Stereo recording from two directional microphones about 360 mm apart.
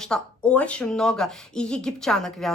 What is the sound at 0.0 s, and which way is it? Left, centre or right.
Speech, centre.